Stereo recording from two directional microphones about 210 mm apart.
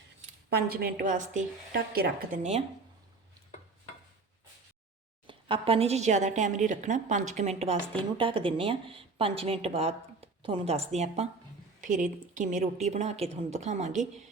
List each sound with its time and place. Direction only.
0.5 s a woman's voice: 45° right (ahead or behind)
5.2 s a woman's voice: 25° right (ahead or behind)